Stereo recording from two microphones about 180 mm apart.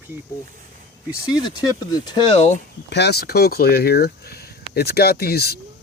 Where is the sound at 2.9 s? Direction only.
65° left (ahead or behind).